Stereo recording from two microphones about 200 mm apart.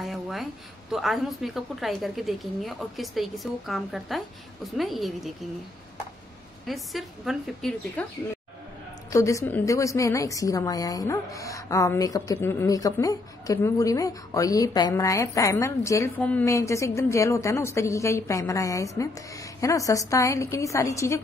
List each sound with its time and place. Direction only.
0.0 s a sound: centre (ahead or behind)
0.9 s a woman's voice: centre (ahead or behind)
6.6 s a woman's voice: centre (ahead or behind)
9.1 s a woman's voice: 15° left (ahead or behind)